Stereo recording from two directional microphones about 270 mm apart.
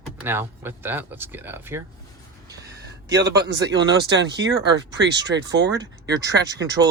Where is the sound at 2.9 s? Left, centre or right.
Right.